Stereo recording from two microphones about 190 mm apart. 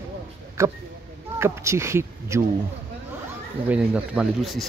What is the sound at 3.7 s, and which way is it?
Speech, 5° right (ahead or behind).